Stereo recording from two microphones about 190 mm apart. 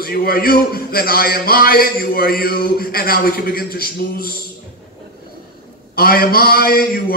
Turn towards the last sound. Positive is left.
turn(degrees=50)  # may be behind; listen again after turning